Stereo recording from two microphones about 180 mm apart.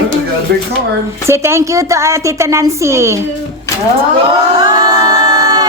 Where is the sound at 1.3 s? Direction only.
15° right (ahead or behind).